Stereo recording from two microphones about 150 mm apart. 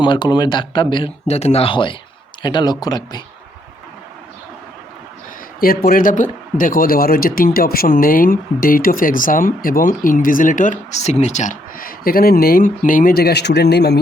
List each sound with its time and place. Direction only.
0.0 s speech: 30° left (ahead or behind)
5.5 s a man's voice: 75° left (ahead or behind)